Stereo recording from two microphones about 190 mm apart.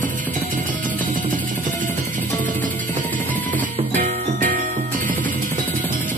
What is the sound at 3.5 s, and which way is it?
Music, 40° right (ahead or behind).